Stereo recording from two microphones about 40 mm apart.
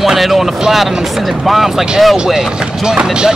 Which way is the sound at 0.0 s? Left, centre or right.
Centre.